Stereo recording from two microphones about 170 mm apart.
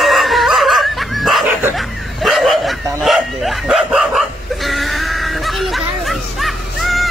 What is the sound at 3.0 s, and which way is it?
Bow-wow, centre (ahead or behind).